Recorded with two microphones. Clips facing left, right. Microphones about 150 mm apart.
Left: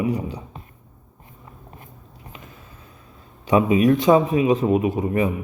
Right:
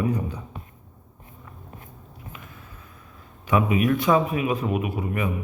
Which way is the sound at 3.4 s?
25° left (ahead or behind).